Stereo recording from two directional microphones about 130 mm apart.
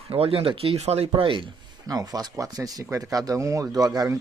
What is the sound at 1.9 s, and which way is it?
Speech, 30° right (ahead or behind).